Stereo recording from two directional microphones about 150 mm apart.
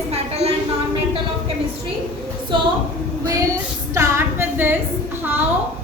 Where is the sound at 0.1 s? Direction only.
45° right (ahead or behind).